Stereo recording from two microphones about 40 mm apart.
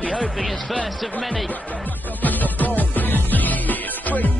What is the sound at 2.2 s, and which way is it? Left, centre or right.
Music, left.